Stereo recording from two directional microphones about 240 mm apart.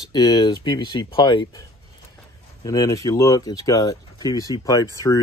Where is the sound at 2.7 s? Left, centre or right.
Centre.